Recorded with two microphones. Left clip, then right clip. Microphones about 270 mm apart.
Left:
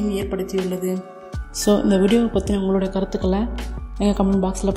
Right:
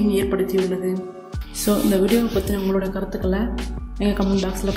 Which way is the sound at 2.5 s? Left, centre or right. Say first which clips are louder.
Left 1 dB; left.